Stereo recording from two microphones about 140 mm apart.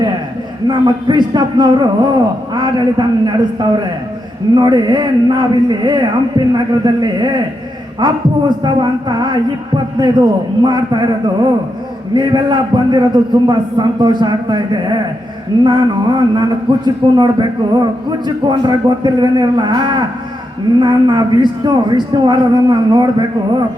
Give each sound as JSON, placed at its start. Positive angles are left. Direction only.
{"t": 0.7, "sound": "a man's voice", "side_deg": -30}
{"t": 12.1, "sound": "a man's voice", "side_deg": -30}